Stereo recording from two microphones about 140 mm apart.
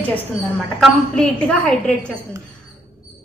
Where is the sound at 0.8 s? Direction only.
5° left (ahead or behind).